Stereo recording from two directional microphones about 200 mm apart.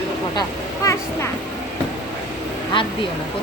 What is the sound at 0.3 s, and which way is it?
Speech, 15° left (ahead or behind).